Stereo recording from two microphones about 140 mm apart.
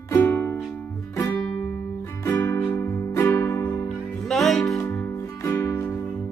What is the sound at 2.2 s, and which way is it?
Music, 20° left (ahead or behind).